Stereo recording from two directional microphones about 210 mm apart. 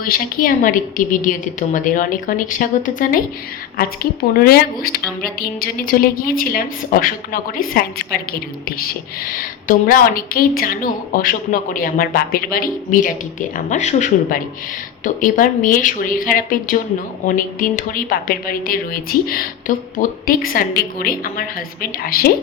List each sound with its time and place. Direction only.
0.0 s a woman's voice: 40° left (ahead or behind)